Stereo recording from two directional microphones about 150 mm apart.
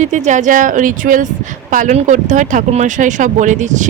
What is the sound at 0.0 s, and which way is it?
Speech, 50° right (ahead or behind).